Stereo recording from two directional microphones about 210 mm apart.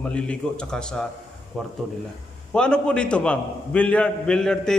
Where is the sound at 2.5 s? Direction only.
5° left (ahead or behind).